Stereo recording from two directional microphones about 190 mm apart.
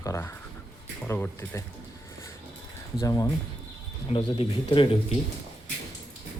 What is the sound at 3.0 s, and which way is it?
Speech, 15° left (ahead or behind).